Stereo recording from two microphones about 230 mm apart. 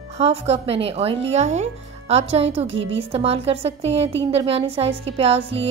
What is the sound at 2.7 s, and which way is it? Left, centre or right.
Speech, right.